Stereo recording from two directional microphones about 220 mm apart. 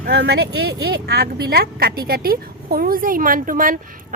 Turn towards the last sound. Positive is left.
turn(degrees=-40)  # may be behind; listen again after turning